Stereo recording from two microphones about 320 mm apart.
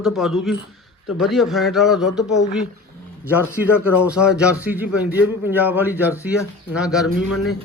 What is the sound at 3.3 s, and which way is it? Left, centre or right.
A man's voice, centre.